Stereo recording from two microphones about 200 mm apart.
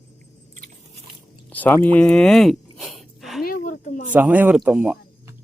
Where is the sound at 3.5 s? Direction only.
40° left (ahead or behind).